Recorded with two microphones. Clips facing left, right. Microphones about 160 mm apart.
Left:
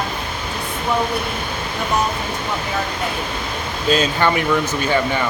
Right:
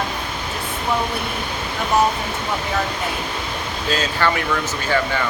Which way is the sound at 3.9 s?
20° left (ahead or behind).